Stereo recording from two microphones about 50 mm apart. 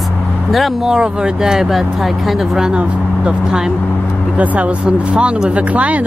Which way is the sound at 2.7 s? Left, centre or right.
Centre.